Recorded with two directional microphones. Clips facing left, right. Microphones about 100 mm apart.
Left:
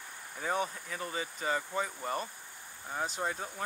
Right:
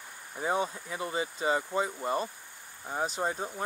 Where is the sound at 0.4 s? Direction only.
20° right (ahead or behind).